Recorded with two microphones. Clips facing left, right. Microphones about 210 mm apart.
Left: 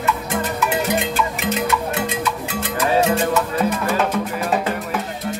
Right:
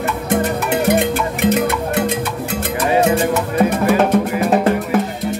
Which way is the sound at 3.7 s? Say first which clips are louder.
Right 6 dB; 55° right (ahead or behind).